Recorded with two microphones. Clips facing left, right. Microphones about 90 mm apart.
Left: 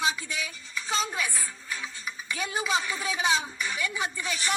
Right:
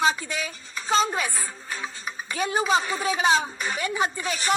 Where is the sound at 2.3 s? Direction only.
35° right (ahead or behind).